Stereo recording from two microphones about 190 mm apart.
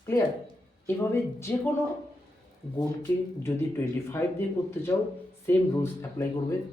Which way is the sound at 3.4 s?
15° left (ahead or behind).